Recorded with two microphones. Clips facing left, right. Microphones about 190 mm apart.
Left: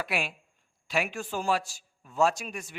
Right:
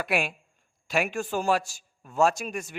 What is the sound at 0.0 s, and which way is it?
A man's voice, 50° right (ahead or behind).